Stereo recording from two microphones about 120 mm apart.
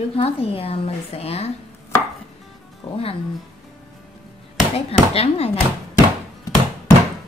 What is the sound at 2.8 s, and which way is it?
Speech, 55° left (ahead or behind).